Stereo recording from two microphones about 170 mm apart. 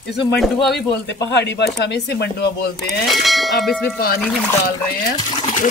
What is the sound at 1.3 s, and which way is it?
Speech, 90° left.